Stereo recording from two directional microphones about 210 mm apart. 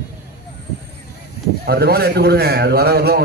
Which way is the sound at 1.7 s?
50° right (ahead or behind).